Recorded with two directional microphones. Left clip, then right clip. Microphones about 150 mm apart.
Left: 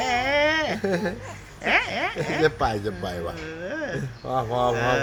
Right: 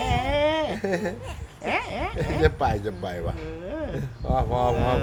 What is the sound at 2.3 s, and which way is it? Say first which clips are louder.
Speech: even; 5° left (ahead or behind).